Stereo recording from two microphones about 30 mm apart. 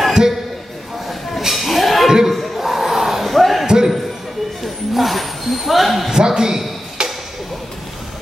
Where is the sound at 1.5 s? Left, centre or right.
Centre.